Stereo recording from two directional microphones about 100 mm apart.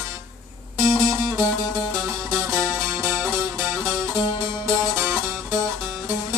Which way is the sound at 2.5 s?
30° right (ahead or behind).